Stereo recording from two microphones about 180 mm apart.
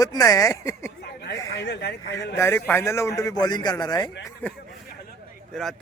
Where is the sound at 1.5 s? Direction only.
70° left (ahead or behind).